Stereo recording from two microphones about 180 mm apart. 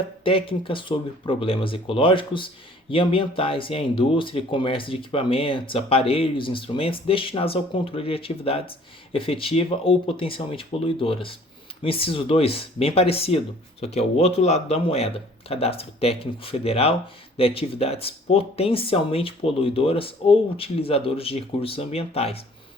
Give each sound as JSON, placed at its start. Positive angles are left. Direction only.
{"t": 0.3, "sound": "speech", "side_deg": 30}